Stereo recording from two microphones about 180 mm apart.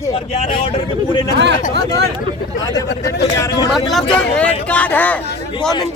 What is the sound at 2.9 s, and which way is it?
Speech, 60° left (ahead or behind).